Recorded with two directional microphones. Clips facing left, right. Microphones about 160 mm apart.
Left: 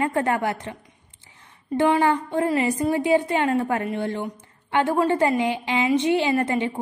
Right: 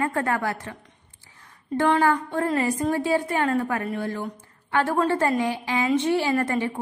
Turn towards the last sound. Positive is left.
turn(degrees=20)  # may be behind; listen again after turning